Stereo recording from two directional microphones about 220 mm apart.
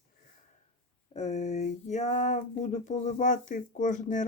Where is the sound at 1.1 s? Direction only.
30° left (ahead or behind).